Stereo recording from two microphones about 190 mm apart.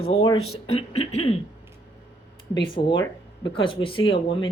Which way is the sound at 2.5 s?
25° left (ahead or behind).